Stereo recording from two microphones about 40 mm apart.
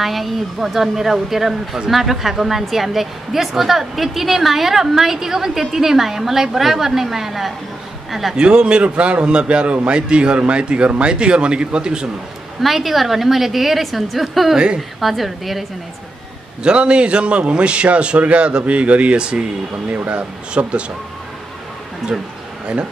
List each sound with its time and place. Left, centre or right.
0.0 s a woman's voice: centre
8.4 s a man's voice: right
12.6 s a woman's voice: centre
16.6 s a man's voice: right
19.9 s speech: right